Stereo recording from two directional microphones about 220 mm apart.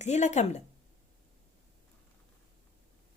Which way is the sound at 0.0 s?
30° left (ahead or behind).